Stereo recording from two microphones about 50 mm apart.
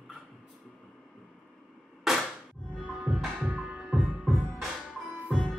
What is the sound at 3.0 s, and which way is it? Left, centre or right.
Music, centre.